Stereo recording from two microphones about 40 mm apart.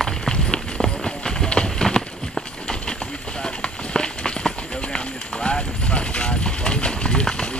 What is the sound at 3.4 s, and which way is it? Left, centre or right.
Run, left.